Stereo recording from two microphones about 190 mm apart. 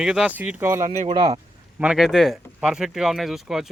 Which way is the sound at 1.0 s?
25° right (ahead or behind).